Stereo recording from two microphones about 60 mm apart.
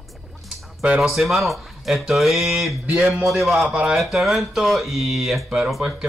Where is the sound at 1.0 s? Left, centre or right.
Centre.